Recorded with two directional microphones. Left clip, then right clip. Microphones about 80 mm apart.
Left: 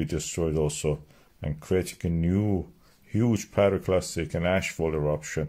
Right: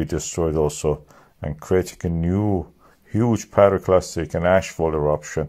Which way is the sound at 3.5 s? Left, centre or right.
Centre.